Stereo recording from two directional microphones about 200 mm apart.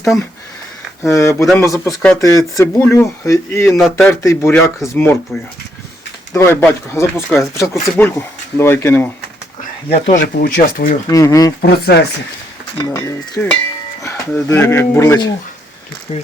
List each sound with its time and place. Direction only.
0.0 s speech: centre (ahead or behind)
1.0 s speech: 15° left (ahead or behind)
3.8 s speech: 5° left (ahead or behind)
6.3 s speech: 10° left (ahead or behind)
10.3 s speech: 45° left (ahead or behind)
11.1 s speech: 15° left (ahead or behind)
11.6 s speech: 55° left (ahead or behind)
12.8 s speech: 15° left (ahead or behind)
16.1 s speech: 30° left (ahead or behind)